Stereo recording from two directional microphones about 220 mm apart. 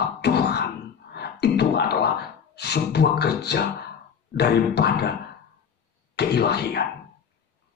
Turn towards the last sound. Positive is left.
turn(degrees=50)  # may be behind; listen again after turning